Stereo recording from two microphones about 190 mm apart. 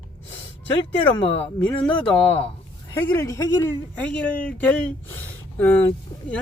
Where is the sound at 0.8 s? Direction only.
30° left (ahead or behind).